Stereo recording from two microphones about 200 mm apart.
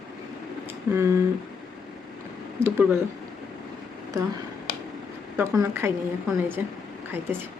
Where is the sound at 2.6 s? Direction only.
10° right (ahead or behind).